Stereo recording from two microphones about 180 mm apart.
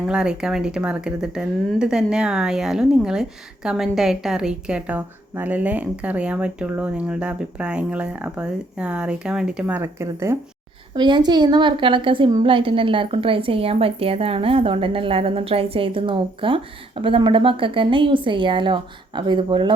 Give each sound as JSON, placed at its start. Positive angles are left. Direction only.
{"t": 0.1, "sound": "speech", "side_deg": -5}
{"t": 10.9, "sound": "a woman's voice", "side_deg": -25}